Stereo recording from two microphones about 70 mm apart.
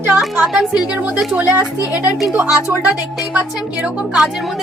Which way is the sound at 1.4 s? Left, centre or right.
Right.